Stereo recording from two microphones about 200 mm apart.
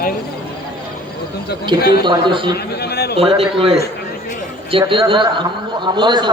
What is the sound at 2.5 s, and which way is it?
Speech, 55° left (ahead or behind).